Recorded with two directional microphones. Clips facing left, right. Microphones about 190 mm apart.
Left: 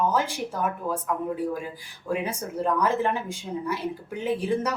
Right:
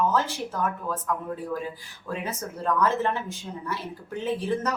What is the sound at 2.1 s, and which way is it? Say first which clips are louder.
Speech: left 4 dB; 15° left (ahead or behind).